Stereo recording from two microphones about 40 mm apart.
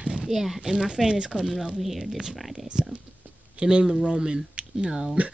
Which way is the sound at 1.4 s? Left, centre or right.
Centre.